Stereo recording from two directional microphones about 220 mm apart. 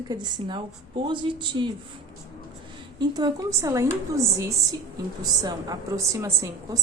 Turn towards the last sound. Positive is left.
turn(degrees=-15)  # may be behind; listen again after turning